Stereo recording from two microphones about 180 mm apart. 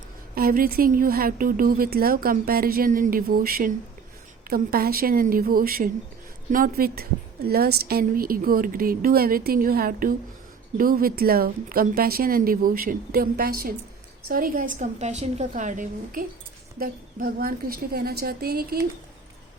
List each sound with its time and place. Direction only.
0.3 s a woman's voice: 55° right (ahead or behind)